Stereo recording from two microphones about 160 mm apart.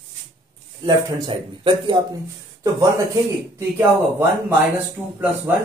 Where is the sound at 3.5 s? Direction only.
15° right (ahead or behind).